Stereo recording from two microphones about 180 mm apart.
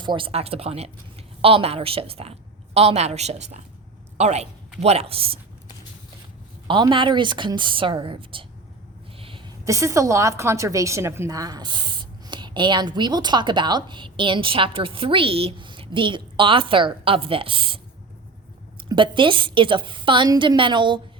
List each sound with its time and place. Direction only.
0.0 s a woman's voice: 25° right (ahead or behind)
6.7 s a woman's voice: 25° right (ahead or behind)
9.1 s a sound: 30° right (ahead or behind)
9.6 s a woman's voice: 15° right (ahead or behind)
18.9 s a woman's voice: 25° right (ahead or behind)